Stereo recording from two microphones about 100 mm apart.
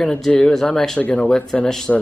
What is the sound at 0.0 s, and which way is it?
Speech, 5° left (ahead or behind).